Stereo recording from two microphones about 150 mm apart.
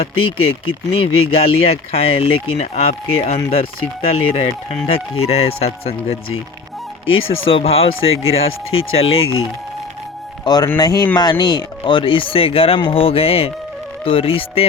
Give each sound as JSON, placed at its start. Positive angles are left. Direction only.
{"t": 0.0, "sound": "speech", "side_deg": 40}
{"t": 7.4, "sound": "speech", "side_deg": 40}
{"t": 10.4, "sound": "speech", "side_deg": 25}